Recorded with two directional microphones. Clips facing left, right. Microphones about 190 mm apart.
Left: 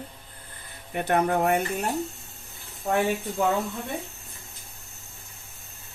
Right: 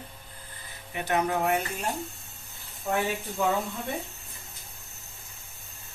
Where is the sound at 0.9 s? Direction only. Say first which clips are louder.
Left 4 dB; 55° left (ahead or behind).